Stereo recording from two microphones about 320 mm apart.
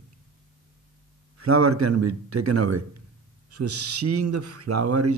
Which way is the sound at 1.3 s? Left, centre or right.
Right.